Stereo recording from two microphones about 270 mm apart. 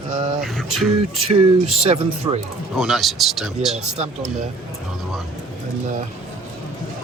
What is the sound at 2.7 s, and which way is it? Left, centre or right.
Speech, centre.